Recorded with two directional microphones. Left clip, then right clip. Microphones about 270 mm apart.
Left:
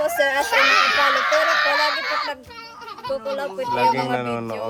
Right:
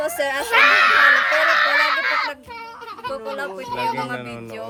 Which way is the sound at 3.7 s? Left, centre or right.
Centre.